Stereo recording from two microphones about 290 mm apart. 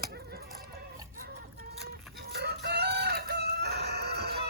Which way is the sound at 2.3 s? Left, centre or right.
Right.